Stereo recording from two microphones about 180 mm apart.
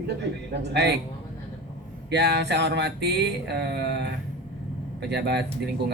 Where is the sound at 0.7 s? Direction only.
65° right (ahead or behind).